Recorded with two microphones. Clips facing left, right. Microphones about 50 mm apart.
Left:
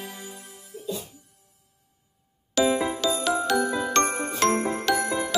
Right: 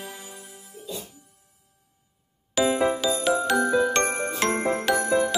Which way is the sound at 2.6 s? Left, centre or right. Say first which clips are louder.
Left 1 dB; centre.